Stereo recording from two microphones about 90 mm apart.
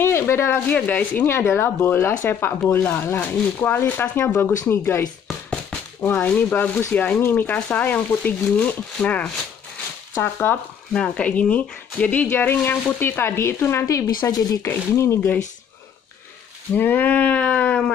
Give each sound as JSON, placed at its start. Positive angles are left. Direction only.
{"t": 0.0, "sound": "a sound", "side_deg": 30}
{"t": 0.7, "sound": "speech", "side_deg": 15}
{"t": 6.0, "sound": "speech", "side_deg": 20}
{"t": 10.9, "sound": "speech", "side_deg": 10}
{"t": 16.7, "sound": "speech", "side_deg": 20}